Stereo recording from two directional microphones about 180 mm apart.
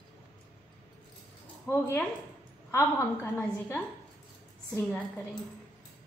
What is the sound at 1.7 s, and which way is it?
A woman's voice, 15° left (ahead or behind).